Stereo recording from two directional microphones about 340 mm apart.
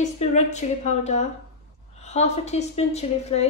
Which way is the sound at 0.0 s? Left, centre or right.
Centre.